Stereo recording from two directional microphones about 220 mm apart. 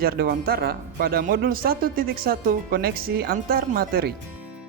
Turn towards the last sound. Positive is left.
turn(degrees=-45)  # may be behind; listen again after turning